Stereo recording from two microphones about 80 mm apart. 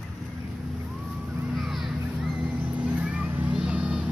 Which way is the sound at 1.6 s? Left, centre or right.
Centre.